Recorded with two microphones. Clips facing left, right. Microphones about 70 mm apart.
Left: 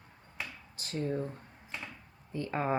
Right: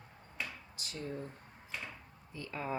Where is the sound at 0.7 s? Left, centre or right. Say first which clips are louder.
Left 12 dB; left.